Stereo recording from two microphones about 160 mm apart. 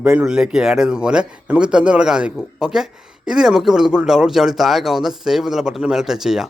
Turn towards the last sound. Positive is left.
turn(degrees=-5)  # may be behind; listen again after turning